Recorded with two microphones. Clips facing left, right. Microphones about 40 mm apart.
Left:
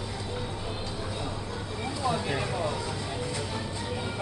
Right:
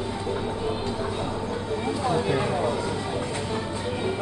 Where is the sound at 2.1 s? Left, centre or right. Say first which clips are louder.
Right 7 dB; centre.